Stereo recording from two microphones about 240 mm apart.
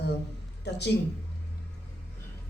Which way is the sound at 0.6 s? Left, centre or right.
Left.